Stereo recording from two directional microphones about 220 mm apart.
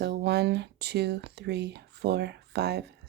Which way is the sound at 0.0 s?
50° right (ahead or behind).